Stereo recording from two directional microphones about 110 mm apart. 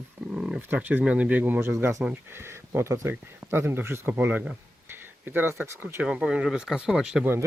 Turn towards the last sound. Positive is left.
turn(degrees=-5)  # may be behind; listen again after turning